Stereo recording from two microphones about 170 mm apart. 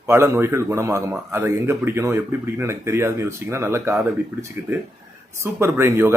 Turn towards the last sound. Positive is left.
turn(degrees=-15)  # may be behind; listen again after turning